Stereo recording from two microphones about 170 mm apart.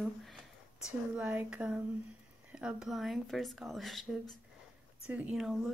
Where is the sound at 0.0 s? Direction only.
Centre (ahead or behind).